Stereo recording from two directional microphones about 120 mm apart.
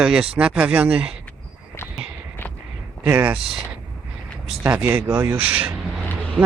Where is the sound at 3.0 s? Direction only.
15° right (ahead or behind).